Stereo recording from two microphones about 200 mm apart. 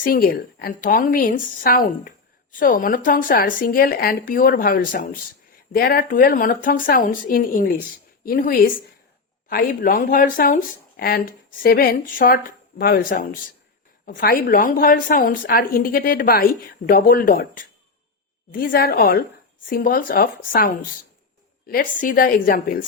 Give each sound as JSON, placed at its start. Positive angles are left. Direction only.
{"t": 0.0, "sound": "speech", "side_deg": 45}